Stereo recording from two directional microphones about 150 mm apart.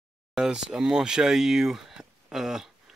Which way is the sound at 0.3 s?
5° right (ahead or behind).